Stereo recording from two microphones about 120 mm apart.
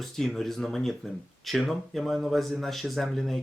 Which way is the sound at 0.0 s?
Centre (ahead or behind).